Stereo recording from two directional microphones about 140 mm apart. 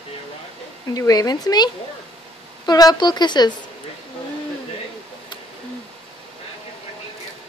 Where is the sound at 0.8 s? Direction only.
25° left (ahead or behind).